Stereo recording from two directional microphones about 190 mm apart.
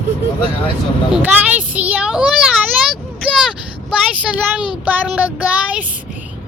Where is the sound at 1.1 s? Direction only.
10° right (ahead or behind).